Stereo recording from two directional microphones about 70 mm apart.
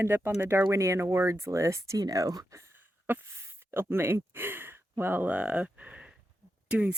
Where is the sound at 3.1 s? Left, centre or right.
Right.